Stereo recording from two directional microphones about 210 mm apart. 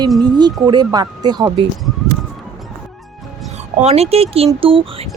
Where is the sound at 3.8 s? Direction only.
30° right (ahead or behind).